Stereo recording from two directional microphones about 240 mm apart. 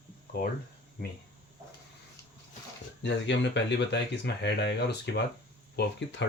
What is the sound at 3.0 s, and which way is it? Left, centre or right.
Speech, left.